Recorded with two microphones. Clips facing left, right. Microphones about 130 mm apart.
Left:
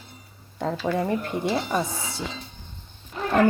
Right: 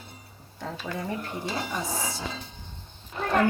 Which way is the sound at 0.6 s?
65° left (ahead or behind).